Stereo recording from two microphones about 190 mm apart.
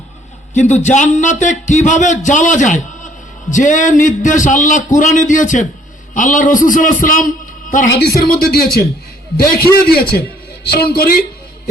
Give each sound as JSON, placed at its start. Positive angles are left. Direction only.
{"t": 0.5, "sound": "a man's voice", "side_deg": 40}
{"t": 7.9, "sound": "a man's voice", "side_deg": 60}